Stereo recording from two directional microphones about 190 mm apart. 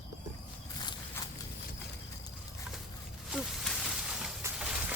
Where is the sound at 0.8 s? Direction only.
20° left (ahead or behind).